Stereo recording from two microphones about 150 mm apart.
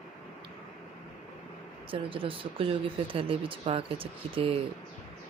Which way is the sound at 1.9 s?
35° right (ahead or behind).